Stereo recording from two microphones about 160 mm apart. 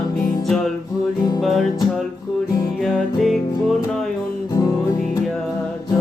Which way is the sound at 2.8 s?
Centre (ahead or behind).